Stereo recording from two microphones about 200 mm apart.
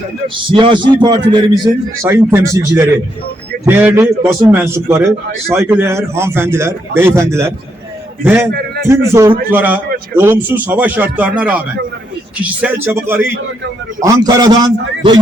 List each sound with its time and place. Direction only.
0.5 s a man's voice: 25° right (ahead or behind)
8.5 s a sound: 50° right (ahead or behind)
8.9 s a man's voice: 15° right (ahead or behind)